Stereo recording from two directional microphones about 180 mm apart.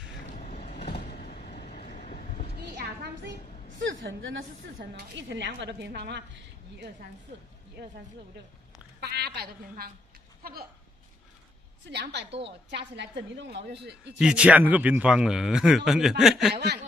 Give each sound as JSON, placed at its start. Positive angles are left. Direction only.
{"t": 0.3, "sound": "vehicle", "side_deg": 40}
{"t": 3.7, "sound": "a woman's voice", "side_deg": -90}
{"t": 4.9, "sound": "a woman's voice", "side_deg": -80}
{"t": 9.0, "sound": "a sound", "side_deg": -65}
{"t": 11.8, "sound": "a woman's voice", "side_deg": -70}
{"t": 14.1, "sound": "speech", "side_deg": -5}
{"t": 16.5, "sound": "speech", "side_deg": -65}